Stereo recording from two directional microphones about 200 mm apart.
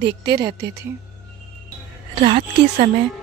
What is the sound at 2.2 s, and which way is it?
Speech, 30° right (ahead or behind).